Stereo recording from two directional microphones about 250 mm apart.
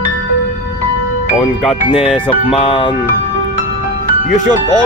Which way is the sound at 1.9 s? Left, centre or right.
Centre.